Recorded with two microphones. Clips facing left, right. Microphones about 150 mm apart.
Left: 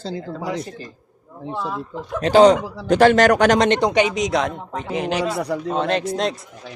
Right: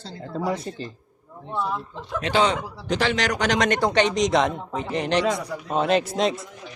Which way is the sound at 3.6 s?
25° left (ahead or behind).